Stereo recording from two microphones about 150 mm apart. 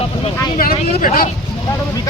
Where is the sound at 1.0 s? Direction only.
70° left (ahead or behind).